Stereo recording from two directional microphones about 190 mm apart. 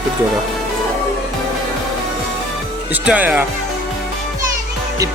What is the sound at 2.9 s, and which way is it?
Speech, 5° right (ahead or behind).